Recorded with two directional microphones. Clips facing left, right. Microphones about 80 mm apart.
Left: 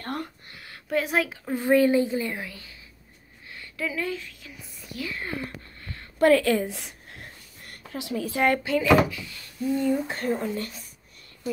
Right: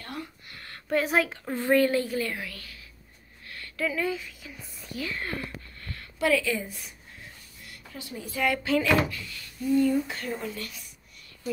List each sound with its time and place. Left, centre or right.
0.0 s a sound: left
0.8 s speech: centre
1.5 s a woman's voice: centre
3.4 s a sound: centre
3.7 s speech: centre
5.2 s a sound: centre
6.1 s a woman's voice: left
7.6 s a sound: left
8.0 s a woman's voice: left
8.6 s speech: centre
9.3 s a woman's voice: left
10.0 s speech: left